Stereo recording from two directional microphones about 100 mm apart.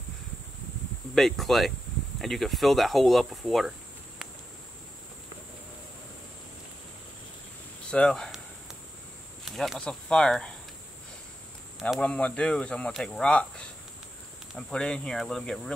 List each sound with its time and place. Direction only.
1.1 s speech: 5° left (ahead or behind)
7.9 s speech: 5° left (ahead or behind)
9.4 s speech: centre (ahead or behind)
12.0 s speech: 10° left (ahead or behind)
14.7 s speech: 10° left (ahead or behind)